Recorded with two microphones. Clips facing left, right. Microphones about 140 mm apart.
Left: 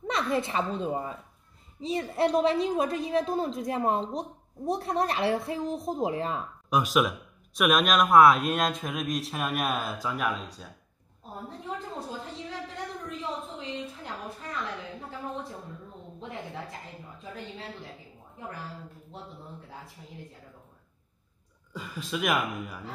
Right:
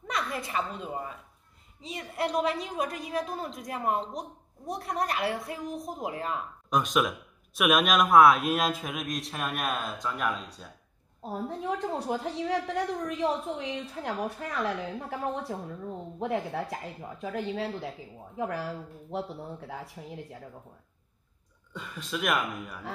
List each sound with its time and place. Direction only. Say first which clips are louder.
0.0 s a woman's voice: left 5 dB; 25° left (ahead or behind)
6.7 s a man's voice: left 2 dB; 5° left (ahead or behind)
11.2 s a woman's voice: right 6 dB; 75° right (ahead or behind)
17.2 s a woman's voice: right 10 dB; 75° right (ahead or behind)
21.7 s a man's voice: left 2 dB; centre (ahead or behind)